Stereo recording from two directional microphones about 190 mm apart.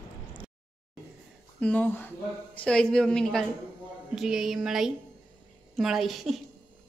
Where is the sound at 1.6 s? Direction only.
5° left (ahead or behind).